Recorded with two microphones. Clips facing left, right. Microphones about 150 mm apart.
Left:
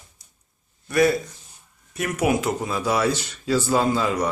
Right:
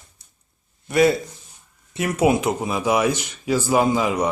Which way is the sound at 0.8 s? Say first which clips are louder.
Right 2 dB; 25° right (ahead or behind).